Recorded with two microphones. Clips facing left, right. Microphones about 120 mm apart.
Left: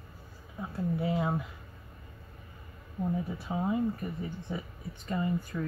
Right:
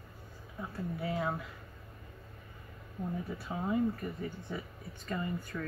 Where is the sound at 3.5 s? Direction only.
15° left (ahead or behind).